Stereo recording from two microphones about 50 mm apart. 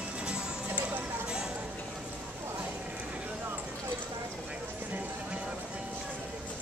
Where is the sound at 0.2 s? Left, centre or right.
Centre.